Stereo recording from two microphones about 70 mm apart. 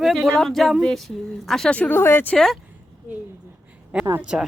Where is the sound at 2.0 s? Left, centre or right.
Left.